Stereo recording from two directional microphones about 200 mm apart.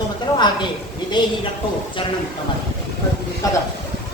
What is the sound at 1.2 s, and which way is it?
Speech, 20° left (ahead or behind).